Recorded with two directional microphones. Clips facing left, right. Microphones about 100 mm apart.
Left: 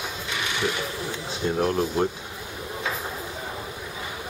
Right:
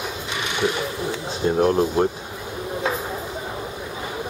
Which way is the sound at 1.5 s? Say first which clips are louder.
Right 5 dB; 35° right (ahead or behind).